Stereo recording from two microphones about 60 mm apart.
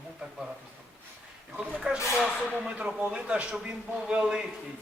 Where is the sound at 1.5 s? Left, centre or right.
Centre.